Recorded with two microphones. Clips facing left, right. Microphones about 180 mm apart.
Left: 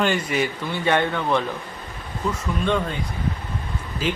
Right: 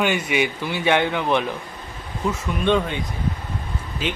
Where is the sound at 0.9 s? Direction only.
5° right (ahead or behind).